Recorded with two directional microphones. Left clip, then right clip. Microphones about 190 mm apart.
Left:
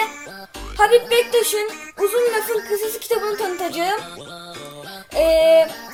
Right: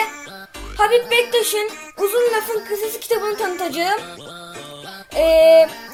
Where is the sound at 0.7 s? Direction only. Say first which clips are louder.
Left 1 dB; 10° left (ahead or behind).